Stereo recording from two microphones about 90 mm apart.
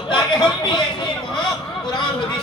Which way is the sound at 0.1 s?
55° left (ahead or behind).